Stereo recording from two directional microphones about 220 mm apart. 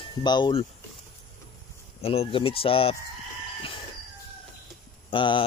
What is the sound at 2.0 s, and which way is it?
Speech, 25° left (ahead or behind).